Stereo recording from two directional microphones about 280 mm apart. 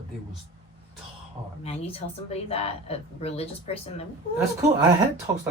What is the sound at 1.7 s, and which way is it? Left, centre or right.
Speech, left.